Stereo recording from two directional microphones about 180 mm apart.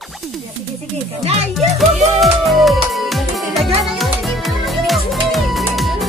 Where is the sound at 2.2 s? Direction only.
Centre (ahead or behind).